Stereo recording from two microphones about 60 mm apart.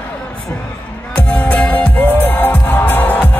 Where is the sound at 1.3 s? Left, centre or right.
Left.